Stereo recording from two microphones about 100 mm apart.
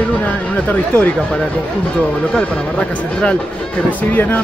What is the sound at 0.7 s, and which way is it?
Speech, 15° left (ahead or behind).